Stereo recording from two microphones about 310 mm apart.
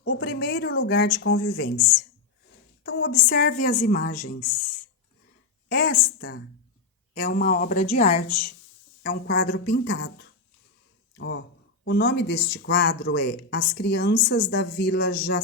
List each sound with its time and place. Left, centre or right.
0.1 s speech: left
2.8 s speech: left
5.6 s speech: left
11.2 s speech: left